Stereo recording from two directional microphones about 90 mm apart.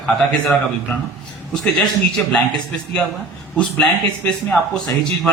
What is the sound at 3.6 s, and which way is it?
Speech, 15° left (ahead or behind).